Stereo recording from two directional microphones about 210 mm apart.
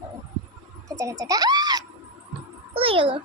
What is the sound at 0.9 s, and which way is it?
Speech, 15° right (ahead or behind).